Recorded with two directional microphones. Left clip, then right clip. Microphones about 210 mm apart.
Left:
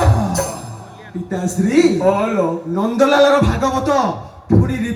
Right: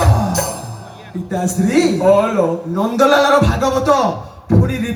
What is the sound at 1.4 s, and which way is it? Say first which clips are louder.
Music: left 1 dB; 30° right (ahead or behind).